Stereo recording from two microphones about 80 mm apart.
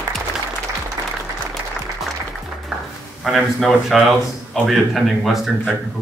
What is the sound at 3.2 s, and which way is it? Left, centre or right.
Speech, centre.